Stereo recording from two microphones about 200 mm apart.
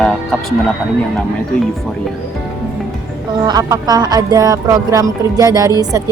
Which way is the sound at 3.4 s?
20° right (ahead or behind).